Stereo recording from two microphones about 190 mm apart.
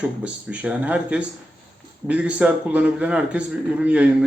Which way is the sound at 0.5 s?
5° right (ahead or behind).